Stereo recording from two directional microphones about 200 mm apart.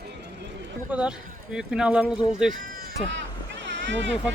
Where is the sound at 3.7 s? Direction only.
60° right (ahead or behind).